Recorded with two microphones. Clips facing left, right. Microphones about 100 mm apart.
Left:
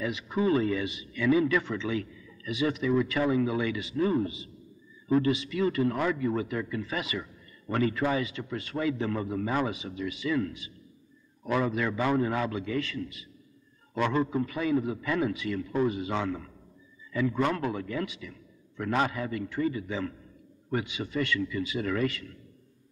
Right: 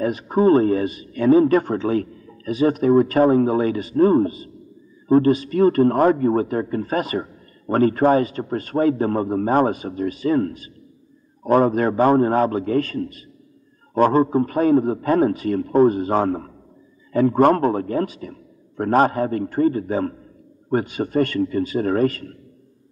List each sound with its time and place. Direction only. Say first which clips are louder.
0.0 s a man's voice: right 11 dB; 45° right (ahead or behind)